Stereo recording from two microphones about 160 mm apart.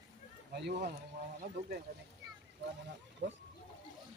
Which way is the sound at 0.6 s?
90° right.